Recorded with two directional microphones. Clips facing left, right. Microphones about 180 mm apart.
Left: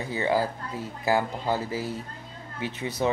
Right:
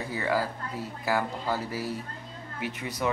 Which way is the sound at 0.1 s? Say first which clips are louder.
Left 4 dB; 25° left (ahead or behind).